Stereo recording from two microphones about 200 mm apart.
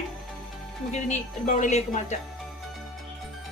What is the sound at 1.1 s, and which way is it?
A woman's voice, 40° left (ahead or behind).